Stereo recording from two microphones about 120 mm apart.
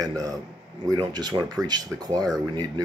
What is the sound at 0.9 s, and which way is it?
Speech, 35° right (ahead or behind).